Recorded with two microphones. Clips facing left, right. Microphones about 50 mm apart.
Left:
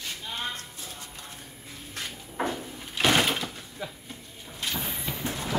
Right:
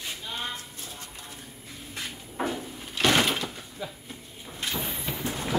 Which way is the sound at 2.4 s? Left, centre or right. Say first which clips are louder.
Even; centre.